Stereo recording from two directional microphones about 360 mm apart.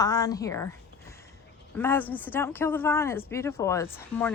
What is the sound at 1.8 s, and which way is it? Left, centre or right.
Speech, centre.